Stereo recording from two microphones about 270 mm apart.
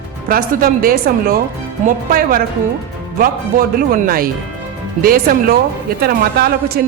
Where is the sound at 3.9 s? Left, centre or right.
Right.